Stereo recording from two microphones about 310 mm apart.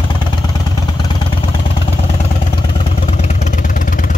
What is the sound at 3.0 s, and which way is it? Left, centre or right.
Vehicle, left.